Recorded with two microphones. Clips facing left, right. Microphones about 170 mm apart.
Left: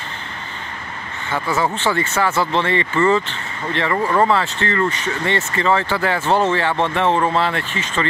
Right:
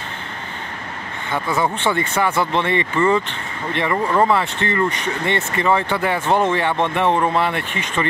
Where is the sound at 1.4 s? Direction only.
5° left (ahead or behind).